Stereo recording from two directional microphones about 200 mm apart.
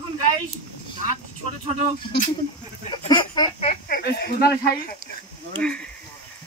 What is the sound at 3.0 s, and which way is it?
Speech, 20° left (ahead or behind).